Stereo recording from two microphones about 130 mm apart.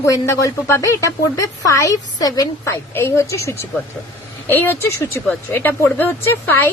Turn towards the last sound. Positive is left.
turn(degrees=15)  # may be behind; listen again after turning